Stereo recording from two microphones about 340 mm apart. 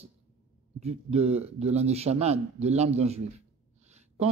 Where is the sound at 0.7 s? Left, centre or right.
Centre.